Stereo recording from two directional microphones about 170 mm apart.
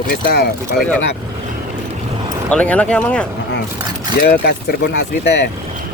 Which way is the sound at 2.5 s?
10° left (ahead or behind).